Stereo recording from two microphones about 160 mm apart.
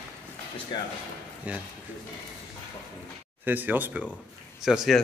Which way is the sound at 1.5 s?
10° right (ahead or behind).